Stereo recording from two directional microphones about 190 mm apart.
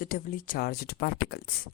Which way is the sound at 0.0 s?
50° left (ahead or behind).